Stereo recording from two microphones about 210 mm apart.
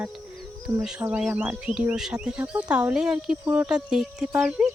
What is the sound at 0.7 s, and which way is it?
Speech, 5° right (ahead or behind).